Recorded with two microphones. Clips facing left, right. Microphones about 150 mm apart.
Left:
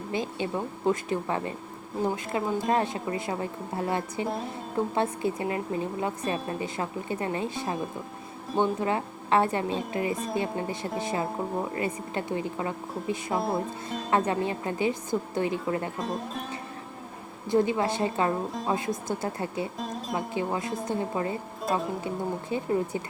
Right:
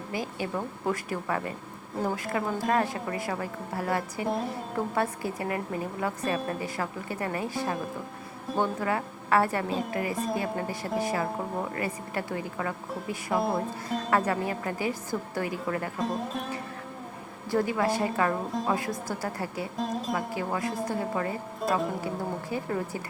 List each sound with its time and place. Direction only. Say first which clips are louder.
0.1 s a woman's voice: left 2 dB; 25° left (ahead or behind)
8.5 s speech: left 2 dB; centre (ahead or behind)
8.8 s a woman's voice: left 1 dB; 25° left (ahead or behind)
13.3 s speech: right 2 dB; centre (ahead or behind)
14.1 s a woman's voice: left 2 dB; 20° left (ahead or behind)
16.0 s speech: right 2 dB; centre (ahead or behind)
17.5 s a woman's voice: left 2 dB; 20° left (ahead or behind)
19.7 s music: right 3 dB; centre (ahead or behind)
20.1 s a woman's voice: left 1 dB; 20° left (ahead or behind)
21.6 s music: right 1 dB; centre (ahead or behind)
22.0 s a woman's voice: left 1 dB; 20° left (ahead or behind)